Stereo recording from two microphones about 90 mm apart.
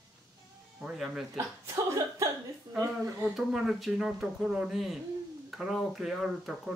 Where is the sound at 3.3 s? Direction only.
5° right (ahead or behind).